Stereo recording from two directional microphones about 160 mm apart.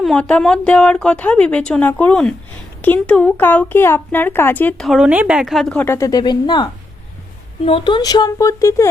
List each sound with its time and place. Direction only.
0.0 s speech: 5° left (ahead or behind)
4.9 s speech: 5° right (ahead or behind); by 8.9 s 20° left (ahead or behind)